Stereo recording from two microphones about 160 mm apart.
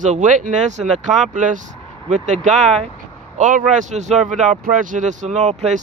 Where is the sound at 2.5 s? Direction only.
Centre (ahead or behind).